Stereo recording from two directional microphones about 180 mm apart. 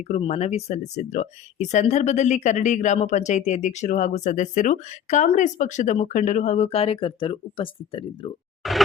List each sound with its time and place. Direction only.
0.1 s speech: 35° left (ahead or behind)
8.6 s speech: centre (ahead or behind)